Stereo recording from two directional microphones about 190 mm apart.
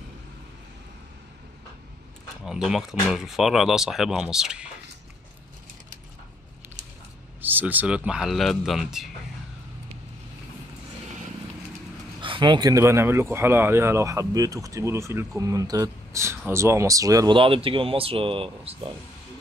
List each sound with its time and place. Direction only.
2.4 s speech: 5° right (ahead or behind)
7.4 s speech: 10° right (ahead or behind)
12.2 s speech: 25° right (ahead or behind)